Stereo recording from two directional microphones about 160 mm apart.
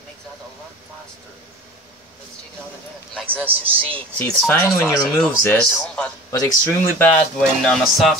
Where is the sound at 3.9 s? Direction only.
5° left (ahead or behind).